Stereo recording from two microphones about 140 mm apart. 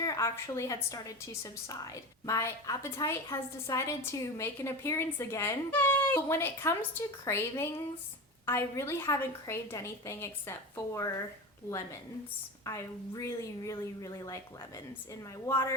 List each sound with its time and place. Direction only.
0.0 s a woman's voice: 20° left (ahead or behind)
12.6 s a woman's voice: 20° left (ahead or behind)
15.4 s speech: 15° left (ahead or behind)